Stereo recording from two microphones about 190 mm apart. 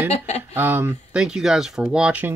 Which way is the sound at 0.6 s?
10° right (ahead or behind).